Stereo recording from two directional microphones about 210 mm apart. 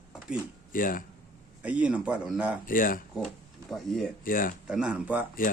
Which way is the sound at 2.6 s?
40° left (ahead or behind).